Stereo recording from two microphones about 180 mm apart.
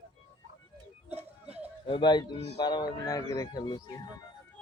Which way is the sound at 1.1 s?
35° right (ahead or behind).